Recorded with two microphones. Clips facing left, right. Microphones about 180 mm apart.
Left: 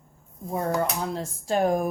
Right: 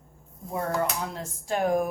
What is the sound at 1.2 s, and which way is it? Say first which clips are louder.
Speech: left 4 dB; 35° left (ahead or behind).